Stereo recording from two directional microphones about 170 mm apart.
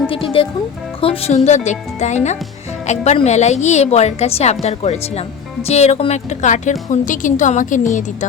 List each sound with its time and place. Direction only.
0.1 s a woman's voice: 30° left (ahead or behind)